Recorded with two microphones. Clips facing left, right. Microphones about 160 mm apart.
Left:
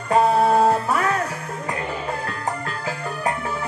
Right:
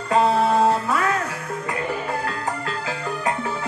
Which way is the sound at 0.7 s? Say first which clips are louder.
Left 1 dB; 35° left (ahead or behind).